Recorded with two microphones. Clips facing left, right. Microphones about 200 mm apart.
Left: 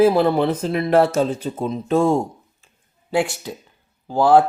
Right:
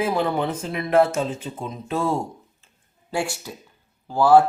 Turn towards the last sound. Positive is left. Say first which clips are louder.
# left 1 dB
turn(degrees=20)  # may be behind; listen again after turning